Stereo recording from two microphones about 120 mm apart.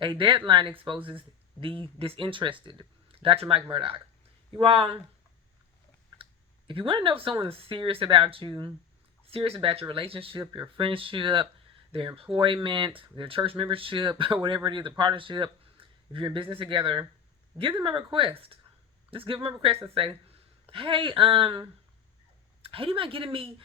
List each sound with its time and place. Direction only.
0.0 s speech: 45° right (ahead or behind)
6.7 s speech: 45° right (ahead or behind)
9.2 s speech: 50° right (ahead or behind)
22.6 s speech: 50° right (ahead or behind)